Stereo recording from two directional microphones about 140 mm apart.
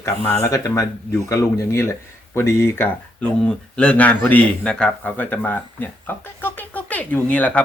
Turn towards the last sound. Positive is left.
turn(degrees=10)  # may be behind; listen again after turning